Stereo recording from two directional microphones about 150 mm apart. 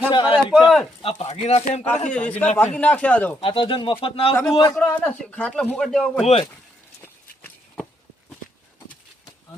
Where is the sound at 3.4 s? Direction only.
35° left (ahead or behind).